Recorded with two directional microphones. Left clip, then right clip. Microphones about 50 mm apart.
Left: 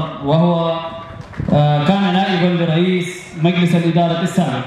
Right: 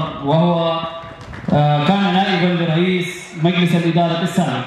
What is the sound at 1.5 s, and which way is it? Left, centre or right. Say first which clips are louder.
Mantra: left 1 dB; right.